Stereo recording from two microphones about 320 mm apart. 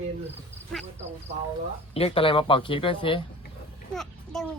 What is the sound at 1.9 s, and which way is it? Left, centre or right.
Speech, centre.